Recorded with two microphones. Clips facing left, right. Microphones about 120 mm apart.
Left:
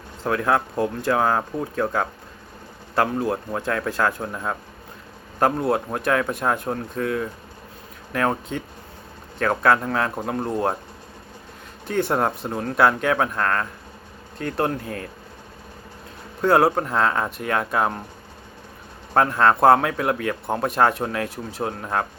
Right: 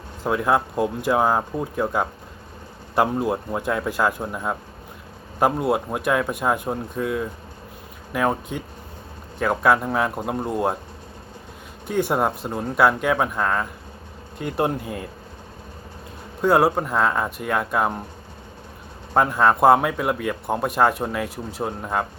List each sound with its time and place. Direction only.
0.3 s a man's voice: 15° right (ahead or behind)
11.9 s speech: 5° right (ahead or behind)
16.4 s speech: 5° right (ahead or behind)
19.1 s speech: 5° right (ahead or behind)